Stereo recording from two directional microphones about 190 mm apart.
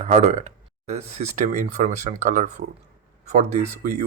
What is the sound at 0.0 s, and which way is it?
Speech, 35° right (ahead or behind).